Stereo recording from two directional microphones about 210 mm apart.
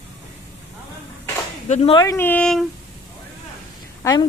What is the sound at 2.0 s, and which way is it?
Speech, 15° left (ahead or behind).